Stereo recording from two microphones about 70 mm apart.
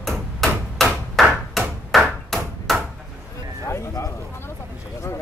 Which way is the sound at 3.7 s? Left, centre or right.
Left.